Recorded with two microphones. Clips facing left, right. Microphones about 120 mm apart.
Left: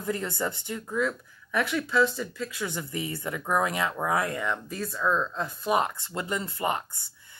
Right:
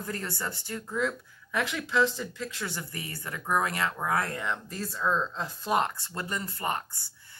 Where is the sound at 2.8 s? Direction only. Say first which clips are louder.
Left 6 dB; 25° left (ahead or behind).